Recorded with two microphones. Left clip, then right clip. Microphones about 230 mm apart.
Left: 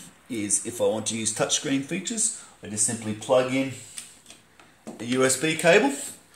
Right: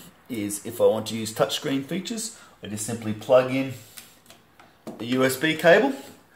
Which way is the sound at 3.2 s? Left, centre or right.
Centre.